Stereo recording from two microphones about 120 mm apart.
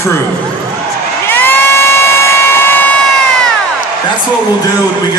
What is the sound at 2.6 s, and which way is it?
Crowd, 15° left (ahead or behind).